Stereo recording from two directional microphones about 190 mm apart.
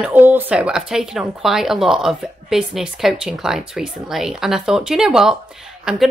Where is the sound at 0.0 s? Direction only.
10° right (ahead or behind).